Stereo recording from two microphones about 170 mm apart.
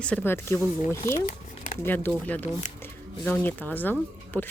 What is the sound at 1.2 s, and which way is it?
Zipper, 50° left (ahead or behind).